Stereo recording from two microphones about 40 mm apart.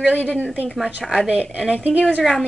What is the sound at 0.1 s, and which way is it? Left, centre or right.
Speech, left.